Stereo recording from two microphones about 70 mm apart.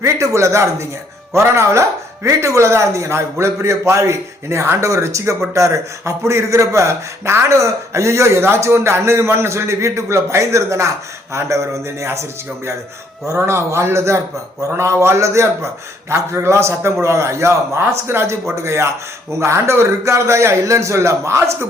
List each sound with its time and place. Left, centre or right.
0.0 s speech: right
13.2 s a man's voice: right